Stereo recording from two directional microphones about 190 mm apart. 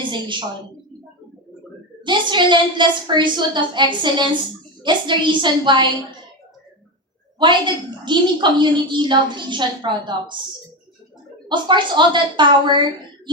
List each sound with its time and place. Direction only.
0.0 s a woman's voice: 25° right (ahead or behind)
2.0 s a woman's voice: 25° right (ahead or behind)
7.3 s a woman's voice: 25° right (ahead or behind)
11.4 s a woman's voice: 25° right (ahead or behind)